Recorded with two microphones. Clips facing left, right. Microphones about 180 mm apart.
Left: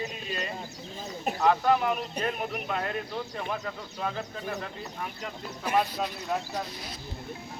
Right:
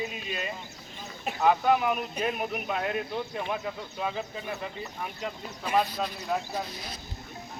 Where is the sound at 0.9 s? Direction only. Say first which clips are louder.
Left 4 dB; 40° left (ahead or behind).